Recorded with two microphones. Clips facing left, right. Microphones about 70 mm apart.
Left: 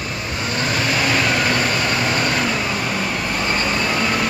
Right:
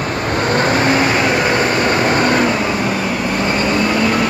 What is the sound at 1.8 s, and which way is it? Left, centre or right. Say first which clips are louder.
Vehicle: right 6 dB; right.